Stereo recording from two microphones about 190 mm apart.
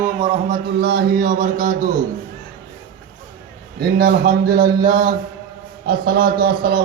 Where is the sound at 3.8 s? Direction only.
55° right (ahead or behind).